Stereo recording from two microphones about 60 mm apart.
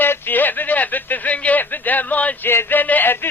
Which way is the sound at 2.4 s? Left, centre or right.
Left.